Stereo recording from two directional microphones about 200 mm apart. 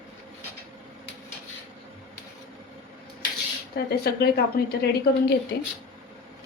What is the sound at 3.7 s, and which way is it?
A woman's voice, 50° left (ahead or behind).